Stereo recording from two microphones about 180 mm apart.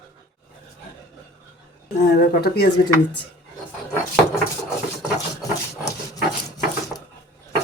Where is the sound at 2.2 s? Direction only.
65° left (ahead or behind).